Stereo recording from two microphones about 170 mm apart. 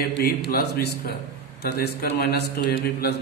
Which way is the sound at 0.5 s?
65° left (ahead or behind).